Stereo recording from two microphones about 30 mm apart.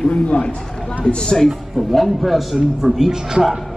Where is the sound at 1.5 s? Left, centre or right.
Centre.